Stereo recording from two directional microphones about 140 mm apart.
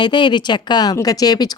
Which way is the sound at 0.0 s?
35° left (ahead or behind).